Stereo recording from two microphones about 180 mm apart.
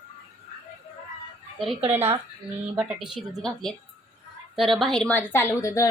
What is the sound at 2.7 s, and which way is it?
Speech, 5° right (ahead or behind).